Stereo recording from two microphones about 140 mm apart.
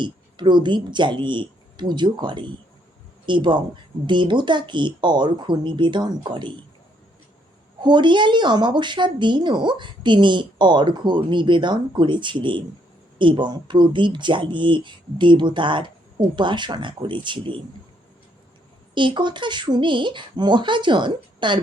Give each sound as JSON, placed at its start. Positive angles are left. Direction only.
{"t": 0.0, "sound": "a woman's voice", "side_deg": -35}
{"t": 7.8, "sound": "a woman's voice", "side_deg": -35}
{"t": 18.9, "sound": "a woman's voice", "side_deg": -35}